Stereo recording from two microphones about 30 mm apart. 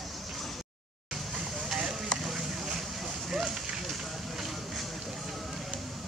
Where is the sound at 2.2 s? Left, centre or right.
Centre.